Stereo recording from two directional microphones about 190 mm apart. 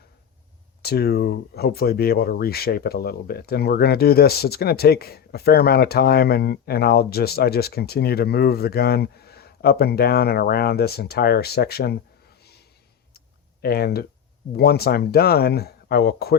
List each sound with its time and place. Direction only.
0.8 s speech: 55° left (ahead or behind)
12.4 s snort: 55° left (ahead or behind)
13.1 s clicking: 55° left (ahead or behind)
14.5 s speech: 55° left (ahead or behind)